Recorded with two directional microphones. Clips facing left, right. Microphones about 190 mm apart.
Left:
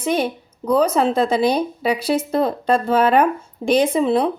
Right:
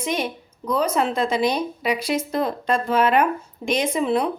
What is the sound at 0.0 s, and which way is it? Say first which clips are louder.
Speech: left 5 dB; 30° left (ahead or behind).